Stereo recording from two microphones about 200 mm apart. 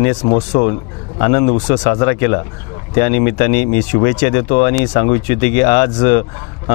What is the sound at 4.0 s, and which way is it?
Speech, 30° left (ahead or behind).